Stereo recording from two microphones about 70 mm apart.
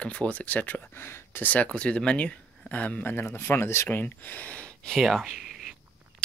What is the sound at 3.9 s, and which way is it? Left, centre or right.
Speech, left.